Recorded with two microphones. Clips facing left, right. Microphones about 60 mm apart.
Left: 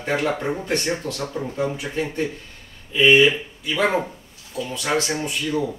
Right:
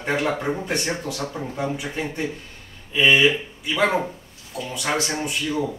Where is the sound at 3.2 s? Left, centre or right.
Centre.